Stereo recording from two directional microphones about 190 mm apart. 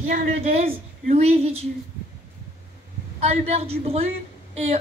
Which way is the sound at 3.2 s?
35° right (ahead or behind).